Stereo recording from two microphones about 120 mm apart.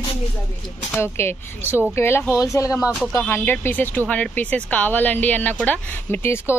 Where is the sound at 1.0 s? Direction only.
20° left (ahead or behind).